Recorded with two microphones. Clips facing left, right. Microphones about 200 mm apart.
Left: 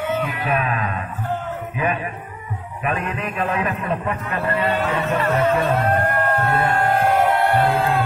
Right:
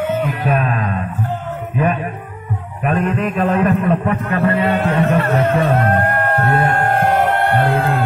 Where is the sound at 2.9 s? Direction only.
55° right (ahead or behind).